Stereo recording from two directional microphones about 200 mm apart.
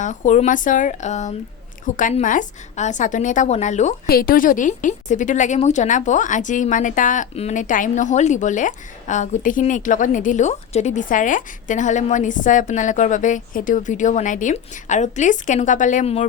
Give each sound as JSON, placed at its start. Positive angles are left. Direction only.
{"t": 0.0, "sound": "a woman's voice", "side_deg": 40}